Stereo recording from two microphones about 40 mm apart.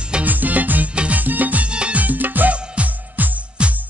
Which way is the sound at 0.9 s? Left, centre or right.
Right.